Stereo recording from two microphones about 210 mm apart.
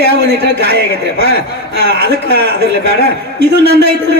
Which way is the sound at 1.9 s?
55° right (ahead or behind).